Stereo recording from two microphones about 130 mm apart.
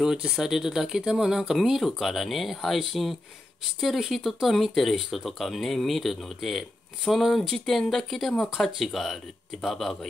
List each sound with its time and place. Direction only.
0.0 s speech: 5° right (ahead or behind)